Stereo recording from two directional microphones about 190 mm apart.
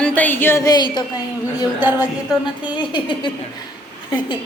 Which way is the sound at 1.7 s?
10° right (ahead or behind).